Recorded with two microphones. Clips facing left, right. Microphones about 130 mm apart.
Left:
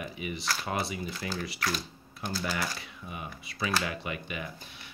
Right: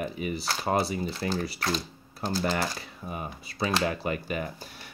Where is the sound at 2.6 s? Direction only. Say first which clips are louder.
Right 4 dB; 35° right (ahead or behind).